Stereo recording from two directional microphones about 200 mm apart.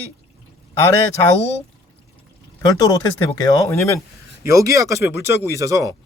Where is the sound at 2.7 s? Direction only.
15° left (ahead or behind).